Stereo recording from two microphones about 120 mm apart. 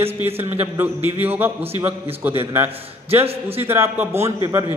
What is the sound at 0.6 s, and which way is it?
A man's voice, 15° right (ahead or behind).